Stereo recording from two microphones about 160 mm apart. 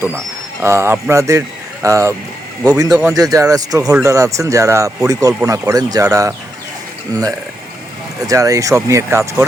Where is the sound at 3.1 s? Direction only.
20° right (ahead or behind).